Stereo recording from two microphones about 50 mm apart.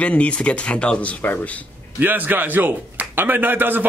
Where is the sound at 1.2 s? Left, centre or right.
Left.